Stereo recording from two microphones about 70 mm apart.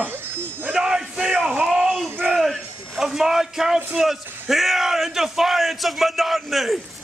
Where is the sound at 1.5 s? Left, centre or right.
Right.